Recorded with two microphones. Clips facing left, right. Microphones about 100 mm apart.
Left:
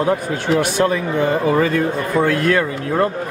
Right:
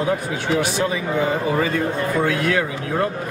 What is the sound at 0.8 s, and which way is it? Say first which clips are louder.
Speech: left 5 dB; 55° left (ahead or behind).